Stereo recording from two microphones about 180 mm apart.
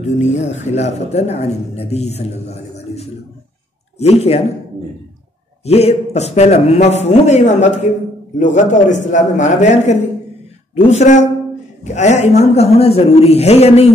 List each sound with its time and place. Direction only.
0.2 s speech: 40° left (ahead or behind)
5.7 s a man's voice: 35° left (ahead or behind)